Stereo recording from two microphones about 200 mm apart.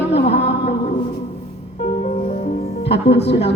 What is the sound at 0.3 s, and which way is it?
Music, 30° left (ahead or behind).